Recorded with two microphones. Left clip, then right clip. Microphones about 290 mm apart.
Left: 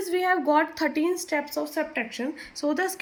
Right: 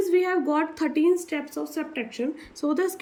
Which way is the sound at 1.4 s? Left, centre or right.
Centre.